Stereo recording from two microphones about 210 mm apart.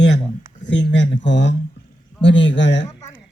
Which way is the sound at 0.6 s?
60° left (ahead or behind).